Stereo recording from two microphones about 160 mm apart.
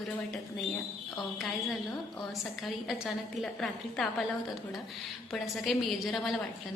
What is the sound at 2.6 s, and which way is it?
Speech, centre (ahead or behind).